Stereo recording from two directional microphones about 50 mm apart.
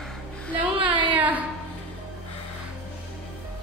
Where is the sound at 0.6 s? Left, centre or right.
Right.